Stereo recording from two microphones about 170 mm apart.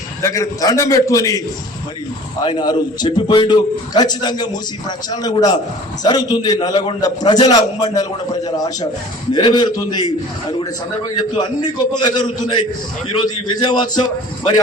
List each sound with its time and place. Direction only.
0.2 s a man's voice: 20° left (ahead or behind)
2.4 s a man's voice: 25° left (ahead or behind)
11.3 s a man's voice: 25° left (ahead or behind)